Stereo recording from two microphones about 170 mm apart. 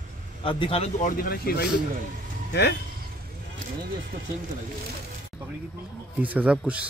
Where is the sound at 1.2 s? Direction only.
60° left (ahead or behind).